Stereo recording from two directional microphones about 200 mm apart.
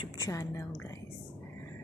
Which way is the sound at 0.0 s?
15° left (ahead or behind).